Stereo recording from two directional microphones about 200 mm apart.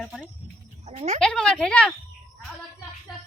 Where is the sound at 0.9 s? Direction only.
35° right (ahead or behind).